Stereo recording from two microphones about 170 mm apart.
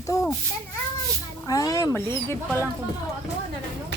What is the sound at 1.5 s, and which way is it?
Speech, 20° left (ahead or behind).